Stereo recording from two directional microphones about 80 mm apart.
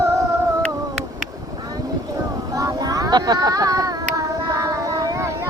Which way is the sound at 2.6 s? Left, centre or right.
Right.